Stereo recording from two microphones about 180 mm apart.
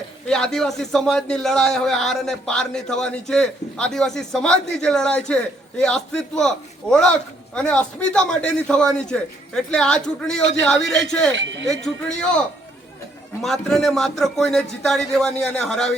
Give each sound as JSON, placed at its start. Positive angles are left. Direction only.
{"t": 0.3, "sound": "a man's voice", "side_deg": 5}
{"t": 7.5, "sound": "a man's voice", "side_deg": 5}
{"t": 11.3, "sound": "speech", "side_deg": -80}
{"t": 13.4, "sound": "a man's voice", "side_deg": 0}